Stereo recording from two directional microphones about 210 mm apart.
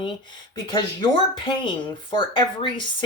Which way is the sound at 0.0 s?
25° left (ahead or behind).